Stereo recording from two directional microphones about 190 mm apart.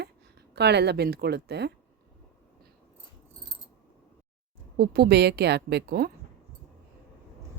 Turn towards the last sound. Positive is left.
turn(degrees=-60)  # may be behind; listen again after turning